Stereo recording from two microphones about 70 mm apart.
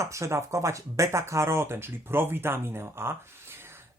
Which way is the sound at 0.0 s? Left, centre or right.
Right.